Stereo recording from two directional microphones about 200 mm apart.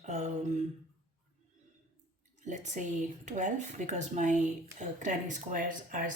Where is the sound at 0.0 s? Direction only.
35° right (ahead or behind).